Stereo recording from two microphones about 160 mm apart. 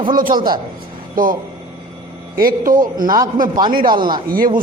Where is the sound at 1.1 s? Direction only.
60° right (ahead or behind).